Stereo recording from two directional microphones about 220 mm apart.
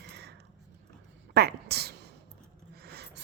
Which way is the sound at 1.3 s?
45° right (ahead or behind).